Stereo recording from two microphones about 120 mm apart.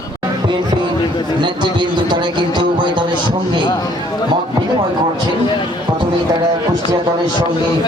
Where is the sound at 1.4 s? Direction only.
40° right (ahead or behind).